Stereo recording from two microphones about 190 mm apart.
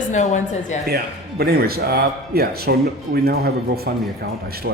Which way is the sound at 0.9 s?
55° right (ahead or behind).